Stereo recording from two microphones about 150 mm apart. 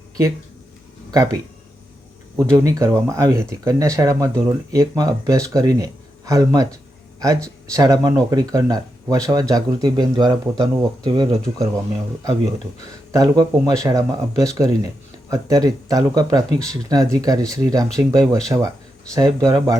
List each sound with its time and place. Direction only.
1.1 s speech: 25° right (ahead or behind)
2.4 s speech: 20° right (ahead or behind)
13.1 s speech: 25° right (ahead or behind)